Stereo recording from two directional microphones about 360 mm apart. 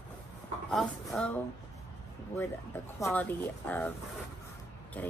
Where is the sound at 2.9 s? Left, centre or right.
Centre.